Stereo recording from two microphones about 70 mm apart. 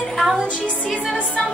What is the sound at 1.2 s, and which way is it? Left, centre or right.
Speech, centre.